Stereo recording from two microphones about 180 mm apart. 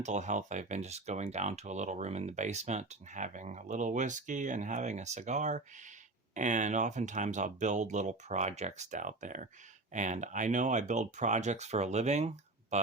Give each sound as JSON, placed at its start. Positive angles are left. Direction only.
{"t": 0.0, "sound": "speech", "side_deg": -40}